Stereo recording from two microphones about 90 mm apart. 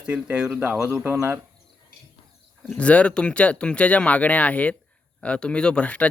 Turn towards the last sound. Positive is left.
turn(degrees=15)  # may be behind; listen again after turning